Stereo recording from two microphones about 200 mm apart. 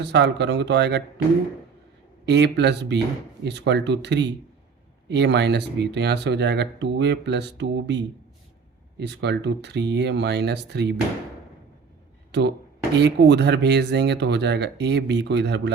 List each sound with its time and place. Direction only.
0.0 s speech: 60° right (ahead or behind)
2.2 s speech: 60° right (ahead or behind)
12.3 s speech: 60° right (ahead or behind)